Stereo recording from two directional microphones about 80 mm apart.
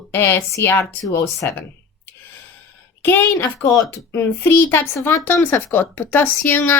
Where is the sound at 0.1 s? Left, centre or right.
Left.